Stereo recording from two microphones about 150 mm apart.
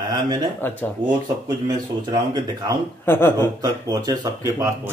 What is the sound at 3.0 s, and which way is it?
Speech, 15° left (ahead or behind).